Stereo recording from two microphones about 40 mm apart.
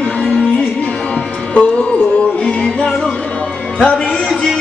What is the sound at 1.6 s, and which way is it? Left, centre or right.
Music, left.